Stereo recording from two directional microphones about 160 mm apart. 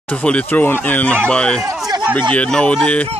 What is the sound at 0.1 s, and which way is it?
Speech, 5° left (ahead or behind).